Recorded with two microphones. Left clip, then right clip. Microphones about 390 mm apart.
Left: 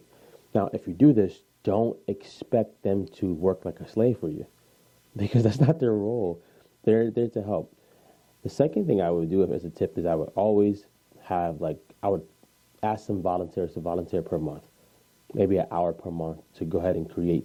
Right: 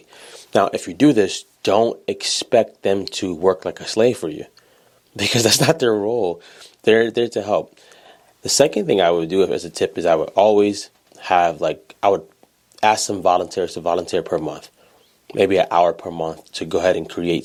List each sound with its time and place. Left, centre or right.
0.2 s speech: centre
6.4 s speech: centre